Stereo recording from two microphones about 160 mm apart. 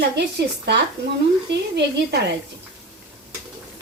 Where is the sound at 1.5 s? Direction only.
90° right.